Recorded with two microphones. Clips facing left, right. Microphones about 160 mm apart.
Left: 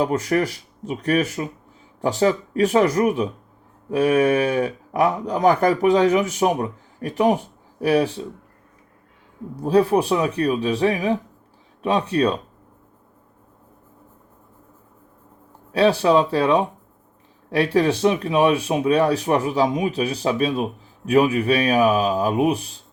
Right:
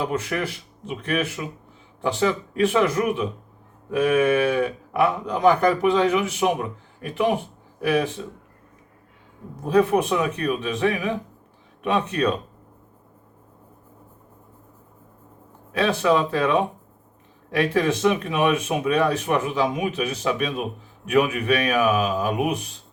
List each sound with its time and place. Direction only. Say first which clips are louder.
0.0 s speech: left 5 dB; 40° left (ahead or behind)
9.6 s speech: left 2 dB; 35° left (ahead or behind)
15.7 s speech: left 4 dB; 35° left (ahead or behind)